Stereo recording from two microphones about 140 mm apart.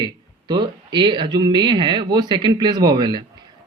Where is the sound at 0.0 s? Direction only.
30° right (ahead or behind).